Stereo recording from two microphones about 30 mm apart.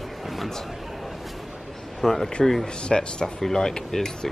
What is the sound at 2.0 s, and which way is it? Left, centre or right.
Speech, centre.